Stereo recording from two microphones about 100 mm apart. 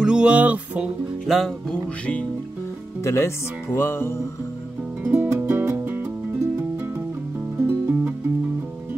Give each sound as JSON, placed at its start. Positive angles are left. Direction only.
{"t": 0.0, "sound": "music", "side_deg": -10}
{"t": 1.2, "sound": "speech", "side_deg": 0}
{"t": 3.0, "sound": "speech", "side_deg": 25}
{"t": 5.1, "sound": "music", "side_deg": -25}
{"t": 7.5, "sound": "music", "side_deg": -25}